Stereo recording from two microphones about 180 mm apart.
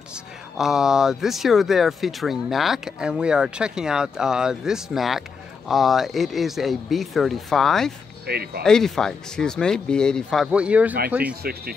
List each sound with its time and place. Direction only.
0.1 s speech: 5° right (ahead or behind)
8.3 s speech: 60° right (ahead or behind)
8.6 s speech: centre (ahead or behind)